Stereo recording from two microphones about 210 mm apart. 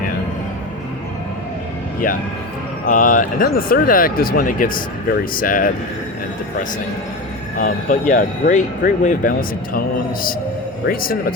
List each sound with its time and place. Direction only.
2.8 s speech: 40° left (ahead or behind)
7.6 s speech: 40° left (ahead or behind)
10.8 s speech: 45° left (ahead or behind)